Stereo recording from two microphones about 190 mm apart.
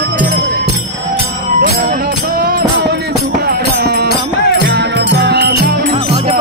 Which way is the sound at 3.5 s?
55° right (ahead or behind).